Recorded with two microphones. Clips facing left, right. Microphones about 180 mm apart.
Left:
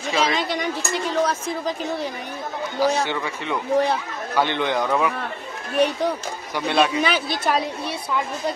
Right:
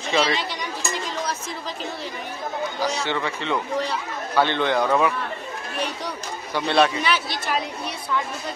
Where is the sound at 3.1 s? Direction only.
15° left (ahead or behind).